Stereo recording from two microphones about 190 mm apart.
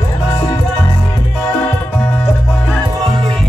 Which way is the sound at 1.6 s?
10° left (ahead or behind).